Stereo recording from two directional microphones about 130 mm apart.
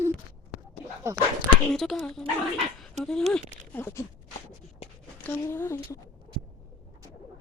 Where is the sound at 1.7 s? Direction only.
Centre (ahead or behind).